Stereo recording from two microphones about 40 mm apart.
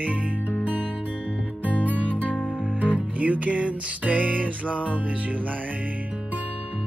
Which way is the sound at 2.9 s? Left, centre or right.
Right.